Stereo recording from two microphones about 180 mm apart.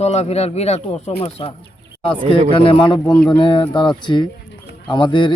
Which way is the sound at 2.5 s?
30° left (ahead or behind).